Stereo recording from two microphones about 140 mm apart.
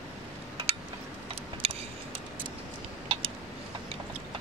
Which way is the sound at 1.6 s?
45° right (ahead or behind).